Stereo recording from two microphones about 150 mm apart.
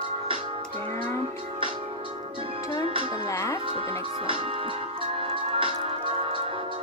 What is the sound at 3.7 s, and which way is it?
Music, 35° right (ahead or behind).